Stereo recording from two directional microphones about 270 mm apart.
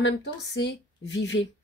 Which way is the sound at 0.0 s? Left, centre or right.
Left.